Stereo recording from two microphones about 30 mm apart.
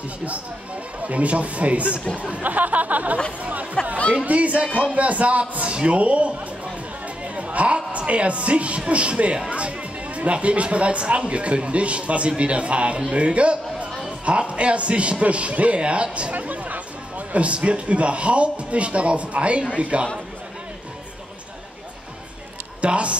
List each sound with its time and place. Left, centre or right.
1.0 s speech: right
2.5 s a sound: right
3.8 s speech: left
4.3 s a man's voice: right
16.3 s a sound: right
17.3 s speech: right
22.8 s a man's voice: right